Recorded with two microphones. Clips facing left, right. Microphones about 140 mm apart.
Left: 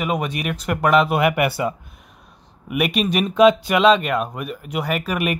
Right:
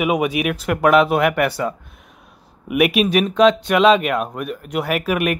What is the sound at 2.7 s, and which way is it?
Speech, centre (ahead or behind).